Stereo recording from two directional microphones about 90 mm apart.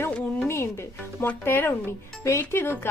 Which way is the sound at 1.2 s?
25° left (ahead or behind).